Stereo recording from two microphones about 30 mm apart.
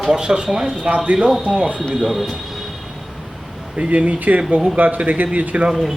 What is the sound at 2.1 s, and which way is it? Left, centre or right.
Speech, centre.